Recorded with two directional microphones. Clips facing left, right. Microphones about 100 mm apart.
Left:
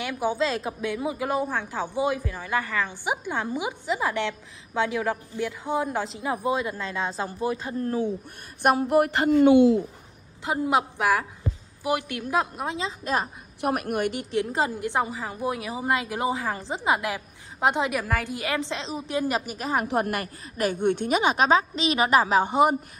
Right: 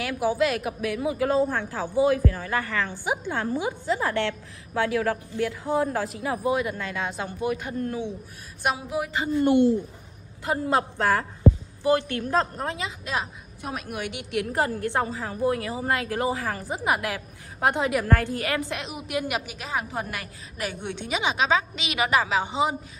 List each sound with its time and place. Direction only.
0.0 s speech: 25° left (ahead or behind)
8.6 s speech: 65° left (ahead or behind)
10.4 s a woman's voice: 20° left (ahead or behind)
13.0 s a woman's voice: 45° left (ahead or behind)
13.6 s a woman's voice: 70° left (ahead or behind)
13.9 s a woman's voice: 45° left (ahead or behind)
14.3 s speech: 25° left (ahead or behind)
18.0 s a woman's voice: 5° left (ahead or behind)
18.3 s a woman's voice: 20° left (ahead or behind); by 19.9 s 45° left (ahead or behind)
19.9 s a woman's voice: 55° left (ahead or behind)